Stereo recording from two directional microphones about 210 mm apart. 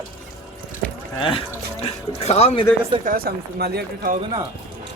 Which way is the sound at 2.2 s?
30° left (ahead or behind).